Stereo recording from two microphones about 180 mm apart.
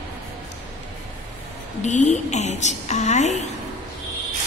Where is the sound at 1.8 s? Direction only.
40° left (ahead or behind).